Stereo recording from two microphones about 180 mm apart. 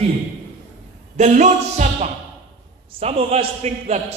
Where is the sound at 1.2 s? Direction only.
40° right (ahead or behind).